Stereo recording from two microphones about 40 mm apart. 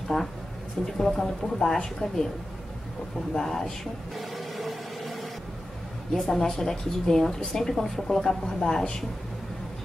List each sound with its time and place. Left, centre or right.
0.1 s speech: centre
0.9 s speech: centre
3.3 s speech: centre
4.6 s a sound: centre
6.1 s speech: centre